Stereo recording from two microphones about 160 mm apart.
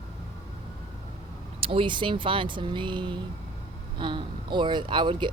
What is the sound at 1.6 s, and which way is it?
Speech, 35° right (ahead or behind).